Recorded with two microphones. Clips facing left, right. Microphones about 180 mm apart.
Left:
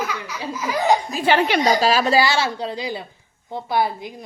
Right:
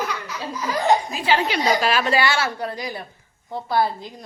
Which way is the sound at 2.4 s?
15° left (ahead or behind).